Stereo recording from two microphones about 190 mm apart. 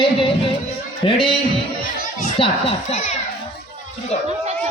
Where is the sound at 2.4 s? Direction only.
35° left (ahead or behind).